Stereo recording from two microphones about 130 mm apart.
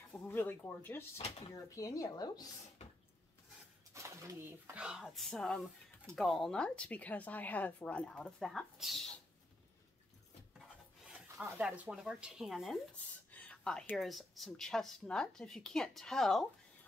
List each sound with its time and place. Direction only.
0.1 s a woman's voice: 15° left (ahead or behind); by 2.4 s 30° left (ahead or behind)
3.9 s a woman's voice: 25° right (ahead or behind); by 9.2 s centre (ahead or behind)
11.1 s a sound: 20° right (ahead or behind)
11.6 s speech: 10° right (ahead or behind)
12.9 s speech: 10° left (ahead or behind)